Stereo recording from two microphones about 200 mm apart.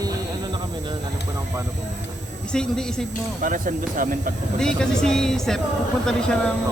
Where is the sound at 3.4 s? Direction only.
40° right (ahead or behind).